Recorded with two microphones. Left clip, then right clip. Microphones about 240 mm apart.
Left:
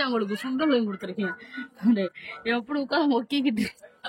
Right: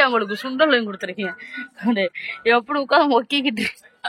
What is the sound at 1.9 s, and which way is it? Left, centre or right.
Speech, centre.